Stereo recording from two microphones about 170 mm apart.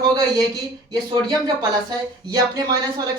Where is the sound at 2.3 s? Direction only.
25° right (ahead or behind).